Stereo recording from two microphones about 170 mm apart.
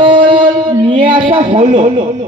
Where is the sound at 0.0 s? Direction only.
30° right (ahead or behind).